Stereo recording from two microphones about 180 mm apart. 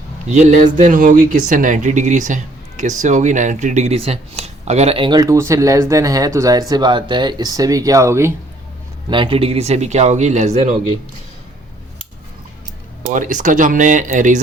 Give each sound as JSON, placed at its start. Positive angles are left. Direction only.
{"t": 0.3, "sound": "speech", "side_deg": -40}
{"t": 9.0, "sound": "speech", "side_deg": -25}
{"t": 13.0, "sound": "speech", "side_deg": -45}